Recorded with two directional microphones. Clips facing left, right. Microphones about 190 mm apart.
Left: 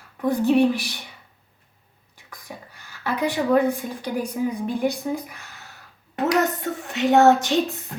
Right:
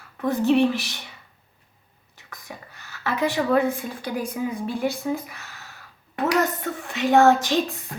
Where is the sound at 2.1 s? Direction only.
15° left (ahead or behind).